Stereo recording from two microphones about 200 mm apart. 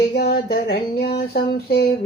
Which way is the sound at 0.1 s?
50° left (ahead or behind).